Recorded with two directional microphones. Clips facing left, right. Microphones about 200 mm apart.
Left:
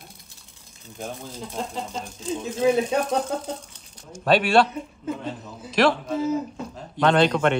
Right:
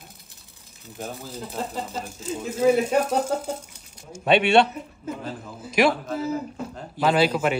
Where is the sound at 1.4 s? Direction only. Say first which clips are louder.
Right 1 dB; 5° right (ahead or behind).